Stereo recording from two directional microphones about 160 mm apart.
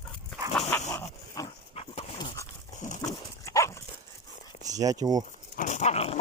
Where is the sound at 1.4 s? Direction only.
20° left (ahead or behind).